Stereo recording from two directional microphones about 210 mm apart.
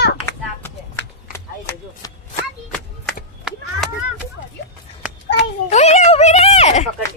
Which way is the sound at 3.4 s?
Centre (ahead or behind).